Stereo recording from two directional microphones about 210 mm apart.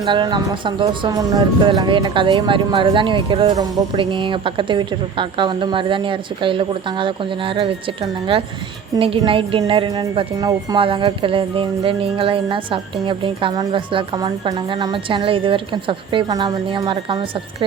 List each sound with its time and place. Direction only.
0.0 s speech: 20° right (ahead or behind)